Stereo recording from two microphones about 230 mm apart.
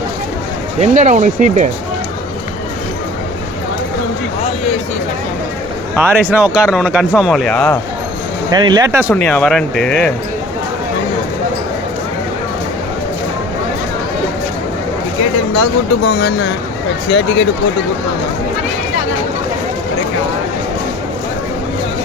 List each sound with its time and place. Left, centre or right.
0.8 s speech: right
6.0 s speech: centre
8.4 s speech: centre
9.1 s speech: centre
15.5 s speech: left